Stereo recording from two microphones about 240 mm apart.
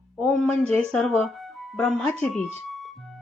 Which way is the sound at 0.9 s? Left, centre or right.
Centre.